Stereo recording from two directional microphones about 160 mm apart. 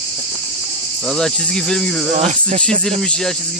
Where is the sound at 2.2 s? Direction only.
50° right (ahead or behind).